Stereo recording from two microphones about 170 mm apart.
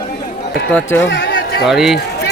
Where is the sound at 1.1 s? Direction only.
75° left (ahead or behind).